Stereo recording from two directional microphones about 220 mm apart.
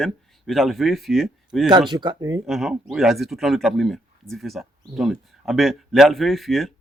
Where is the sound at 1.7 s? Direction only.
20° right (ahead or behind).